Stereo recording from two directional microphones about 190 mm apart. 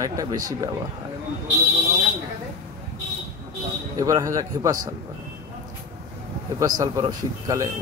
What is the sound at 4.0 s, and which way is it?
Speech, 15° right (ahead or behind).